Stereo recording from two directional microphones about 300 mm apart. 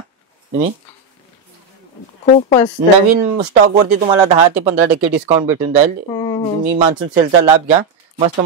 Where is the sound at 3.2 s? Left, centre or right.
Right.